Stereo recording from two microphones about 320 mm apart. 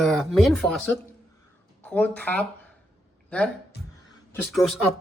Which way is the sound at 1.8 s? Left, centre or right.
Centre.